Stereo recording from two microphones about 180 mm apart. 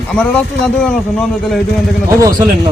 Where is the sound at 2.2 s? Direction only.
20° right (ahead or behind).